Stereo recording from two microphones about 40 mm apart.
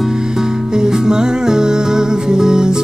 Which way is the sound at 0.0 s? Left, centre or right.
Centre.